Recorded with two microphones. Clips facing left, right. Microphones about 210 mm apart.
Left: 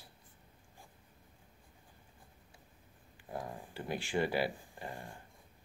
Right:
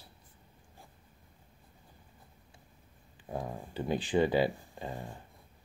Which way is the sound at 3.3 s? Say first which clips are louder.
Right 5 dB; 20° right (ahead or behind).